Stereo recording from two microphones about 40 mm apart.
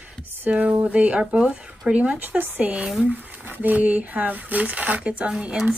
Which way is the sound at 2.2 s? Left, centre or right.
Right.